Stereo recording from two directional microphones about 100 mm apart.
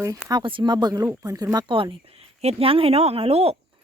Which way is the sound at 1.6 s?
55° right (ahead or behind).